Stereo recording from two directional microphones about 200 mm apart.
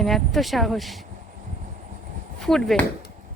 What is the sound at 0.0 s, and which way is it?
Speech, centre (ahead or behind).